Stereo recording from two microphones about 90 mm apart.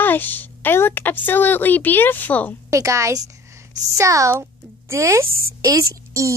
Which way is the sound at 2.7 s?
35° right (ahead or behind).